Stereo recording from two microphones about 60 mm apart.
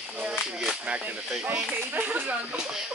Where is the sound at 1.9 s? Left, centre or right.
Right.